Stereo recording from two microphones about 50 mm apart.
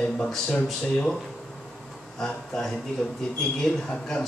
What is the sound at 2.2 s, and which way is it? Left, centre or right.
Speech, centre.